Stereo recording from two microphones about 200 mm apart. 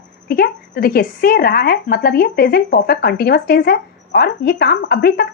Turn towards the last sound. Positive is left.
turn(degrees=50)  # may be behind; listen again after turning